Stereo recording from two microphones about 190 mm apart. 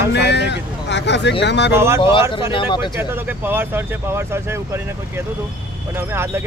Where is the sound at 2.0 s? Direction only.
25° left (ahead or behind).